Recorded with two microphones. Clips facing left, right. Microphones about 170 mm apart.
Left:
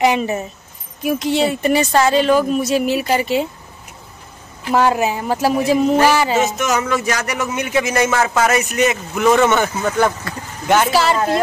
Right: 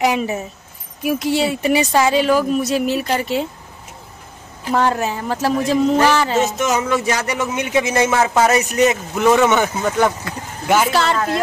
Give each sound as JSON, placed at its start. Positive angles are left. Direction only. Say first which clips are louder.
{"t": 0.0, "sound": "speech", "louder": "left 2 dB", "side_deg": 0}
{"t": 4.6, "sound": "speech", "louder": "left 2 dB", "side_deg": 10}
{"t": 7.1, "sound": "a man's voice", "louder": "right 1 dB", "side_deg": -25}